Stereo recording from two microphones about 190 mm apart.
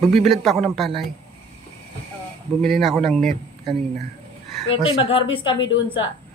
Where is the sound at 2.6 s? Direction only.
Centre (ahead or behind).